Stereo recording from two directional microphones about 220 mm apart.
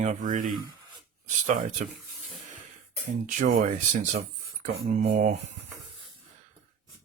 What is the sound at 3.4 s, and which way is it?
Speech, 40° right (ahead or behind).